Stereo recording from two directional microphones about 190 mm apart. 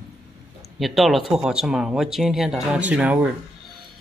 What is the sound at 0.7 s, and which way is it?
Speech, centre (ahead or behind).